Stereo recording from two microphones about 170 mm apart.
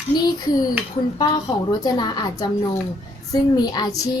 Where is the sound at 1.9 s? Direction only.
25° left (ahead or behind).